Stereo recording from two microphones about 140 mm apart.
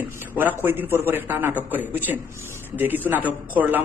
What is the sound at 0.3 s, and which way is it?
A man's voice, 15° right (ahead or behind).